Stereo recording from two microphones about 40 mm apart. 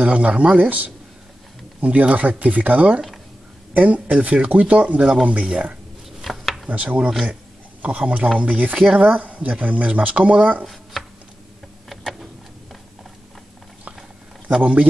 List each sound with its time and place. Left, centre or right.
0.0 s speech: right
0.6 s speech: right
6.2 s a sound: centre
6.7 s speech: right
10.6 s a sound: centre
14.6 s speech: right